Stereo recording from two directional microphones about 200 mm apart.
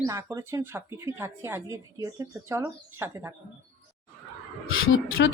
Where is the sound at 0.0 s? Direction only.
15° right (ahead or behind).